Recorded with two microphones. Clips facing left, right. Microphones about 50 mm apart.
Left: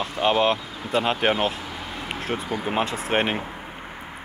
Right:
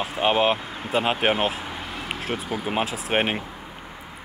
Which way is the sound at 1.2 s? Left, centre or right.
Centre.